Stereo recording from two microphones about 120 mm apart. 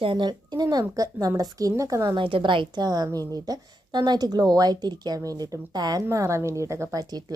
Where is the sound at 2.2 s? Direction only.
45° right (ahead or behind).